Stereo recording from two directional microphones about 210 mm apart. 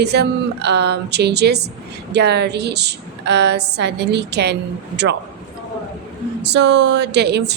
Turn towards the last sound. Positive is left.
turn(degrees=-55)  # may be behind; listen again after turning